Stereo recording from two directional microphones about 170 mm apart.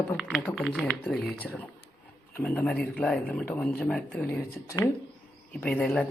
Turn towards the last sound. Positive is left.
turn(degrees=5)  # may be behind; listen again after turning